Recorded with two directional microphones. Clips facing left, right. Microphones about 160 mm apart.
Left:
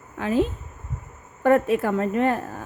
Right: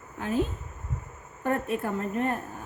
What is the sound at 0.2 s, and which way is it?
A woman's voice, 90° left.